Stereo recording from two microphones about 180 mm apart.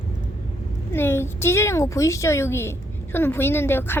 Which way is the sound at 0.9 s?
15° left (ahead or behind).